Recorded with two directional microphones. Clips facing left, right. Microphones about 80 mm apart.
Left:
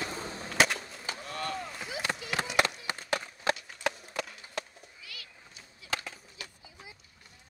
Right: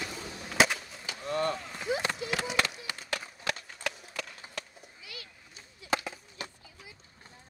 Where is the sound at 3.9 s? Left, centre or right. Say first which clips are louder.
Left 4 dB; left.